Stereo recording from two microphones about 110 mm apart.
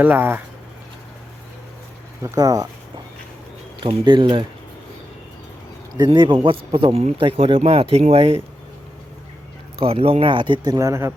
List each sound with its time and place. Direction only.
0.0 s speech: 15° right (ahead or behind)
2.2 s speech: 30° right (ahead or behind)
3.8 s speech: 50° right (ahead or behind)
6.0 s speech: 45° right (ahead or behind); by 8.4 s 60° right (ahead or behind)
9.8 s speech: 60° right (ahead or behind); by 11.1 s 25° right (ahead or behind)